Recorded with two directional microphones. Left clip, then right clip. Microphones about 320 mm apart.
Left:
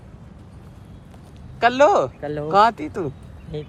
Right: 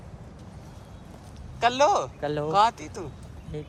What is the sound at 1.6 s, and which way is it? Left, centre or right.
Speech, centre.